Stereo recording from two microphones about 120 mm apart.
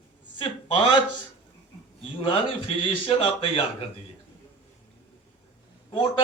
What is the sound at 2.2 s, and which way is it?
A man's voice, 45° left (ahead or behind).